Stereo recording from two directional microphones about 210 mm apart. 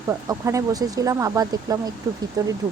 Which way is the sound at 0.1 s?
15° right (ahead or behind).